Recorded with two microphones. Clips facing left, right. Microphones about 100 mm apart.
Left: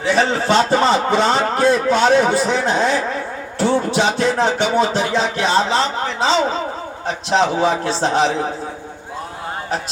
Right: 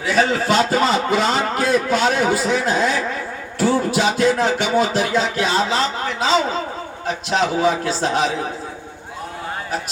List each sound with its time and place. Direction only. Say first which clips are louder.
0.0 s a man's voice: left 1 dB; 30° left (ahead or behind)